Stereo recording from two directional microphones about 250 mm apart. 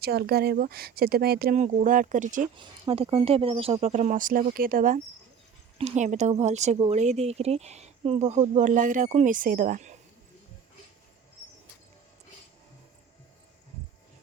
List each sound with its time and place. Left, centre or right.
0.0 s speech: right